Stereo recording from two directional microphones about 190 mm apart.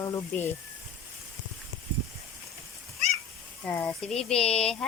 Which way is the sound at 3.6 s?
10° left (ahead or behind).